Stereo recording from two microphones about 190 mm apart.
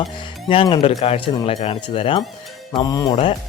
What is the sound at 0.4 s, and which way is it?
Speech, 30° left (ahead or behind).